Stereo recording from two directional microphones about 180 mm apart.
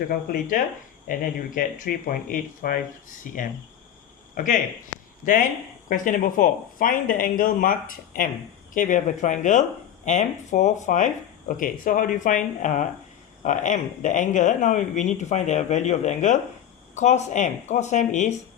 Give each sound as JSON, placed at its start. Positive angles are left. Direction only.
{"t": 0.1, "sound": "speech", "side_deg": 50}
{"t": 4.4, "sound": "speech", "side_deg": 45}